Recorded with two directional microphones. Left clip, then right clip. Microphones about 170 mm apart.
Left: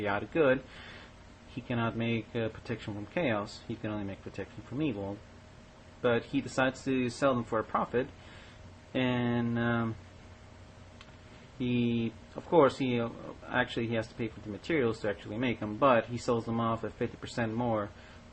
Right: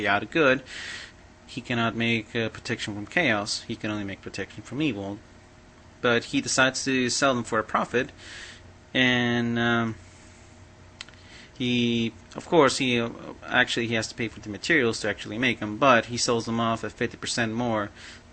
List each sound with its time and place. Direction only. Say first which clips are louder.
0.0 s speech: right 6 dB; 15° right (ahead or behind)
6.0 s speech: right 6 dB; 15° right (ahead or behind)
11.6 s speech: right 7 dB; 15° right (ahead or behind)